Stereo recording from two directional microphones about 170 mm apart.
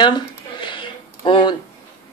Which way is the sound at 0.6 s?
30° left (ahead or behind).